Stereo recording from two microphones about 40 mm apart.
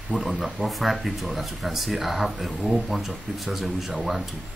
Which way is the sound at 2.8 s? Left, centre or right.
Centre.